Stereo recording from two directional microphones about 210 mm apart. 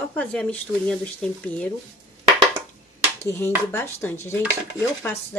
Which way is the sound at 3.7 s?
10° left (ahead or behind).